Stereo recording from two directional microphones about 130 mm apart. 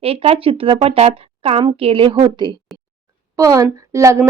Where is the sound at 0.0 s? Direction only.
50° right (ahead or behind).